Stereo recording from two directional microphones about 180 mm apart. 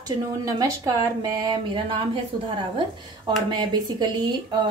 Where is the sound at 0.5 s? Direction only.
20° right (ahead or behind).